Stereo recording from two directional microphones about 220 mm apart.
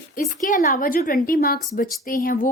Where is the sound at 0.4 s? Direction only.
40° left (ahead or behind).